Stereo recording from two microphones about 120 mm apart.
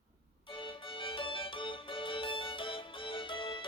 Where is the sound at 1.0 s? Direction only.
45° left (ahead or behind).